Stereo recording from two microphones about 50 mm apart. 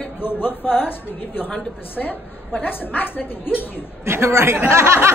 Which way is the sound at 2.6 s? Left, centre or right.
Left.